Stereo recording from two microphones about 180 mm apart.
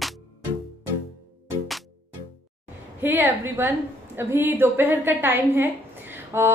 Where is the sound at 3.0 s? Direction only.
10° right (ahead or behind).